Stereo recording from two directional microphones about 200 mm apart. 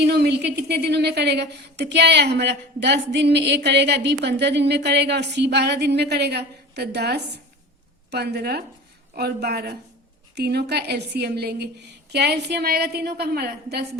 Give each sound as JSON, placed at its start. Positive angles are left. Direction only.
{"t": 0.0, "sound": "a woman's voice", "side_deg": -55}